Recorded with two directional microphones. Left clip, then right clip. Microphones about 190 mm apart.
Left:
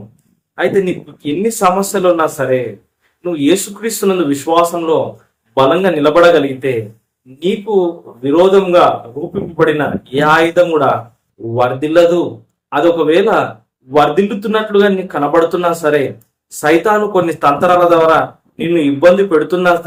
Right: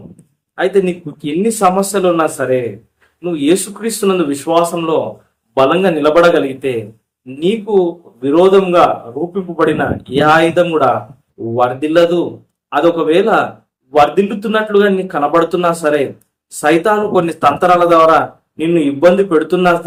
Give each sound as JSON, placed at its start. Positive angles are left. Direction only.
{"t": 0.5, "sound": "speech", "side_deg": -10}